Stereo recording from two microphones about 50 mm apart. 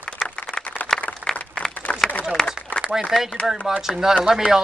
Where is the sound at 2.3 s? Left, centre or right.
Centre.